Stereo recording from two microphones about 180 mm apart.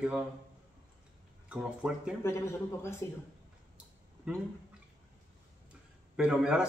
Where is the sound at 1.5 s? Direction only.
5° right (ahead or behind).